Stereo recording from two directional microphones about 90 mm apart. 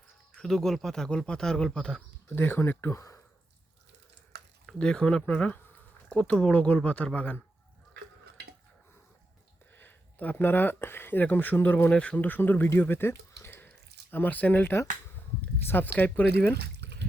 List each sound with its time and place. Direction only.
0.3 s speech: 5° left (ahead or behind)
2.3 s speech: 25° left (ahead or behind)
4.8 s speech: 10° left (ahead or behind)
9.7 s speech: 20° left (ahead or behind)